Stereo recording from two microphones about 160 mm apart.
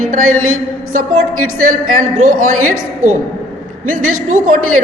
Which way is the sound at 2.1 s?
50° right (ahead or behind).